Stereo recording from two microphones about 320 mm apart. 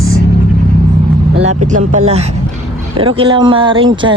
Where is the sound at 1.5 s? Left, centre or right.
Right.